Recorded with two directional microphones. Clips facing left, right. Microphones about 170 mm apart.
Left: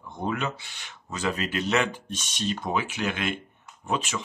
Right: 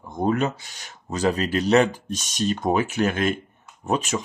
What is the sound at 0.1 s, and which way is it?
Speech, 40° right (ahead or behind).